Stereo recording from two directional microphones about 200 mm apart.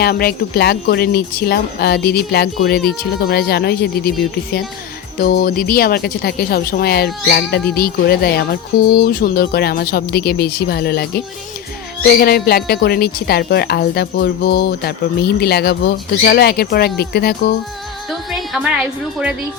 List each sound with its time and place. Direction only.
0.0 s a woman's voice: 50° left (ahead or behind)
5.1 s a woman's voice: 45° left (ahead or behind)
18.3 s music: centre (ahead or behind)